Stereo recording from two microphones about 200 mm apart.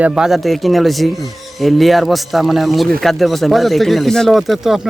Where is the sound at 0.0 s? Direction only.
5° right (ahead or behind).